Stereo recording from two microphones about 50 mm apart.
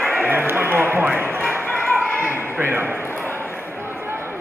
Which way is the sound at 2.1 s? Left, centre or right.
Right.